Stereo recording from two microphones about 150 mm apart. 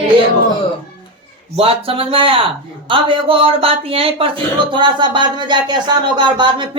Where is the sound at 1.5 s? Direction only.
40° right (ahead or behind).